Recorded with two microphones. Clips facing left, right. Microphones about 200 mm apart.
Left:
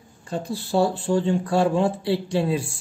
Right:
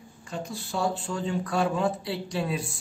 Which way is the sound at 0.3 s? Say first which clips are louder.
Left 8 dB; 35° left (ahead or behind).